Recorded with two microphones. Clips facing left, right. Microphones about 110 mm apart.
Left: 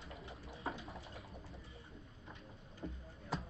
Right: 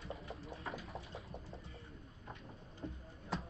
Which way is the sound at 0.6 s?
30° left (ahead or behind).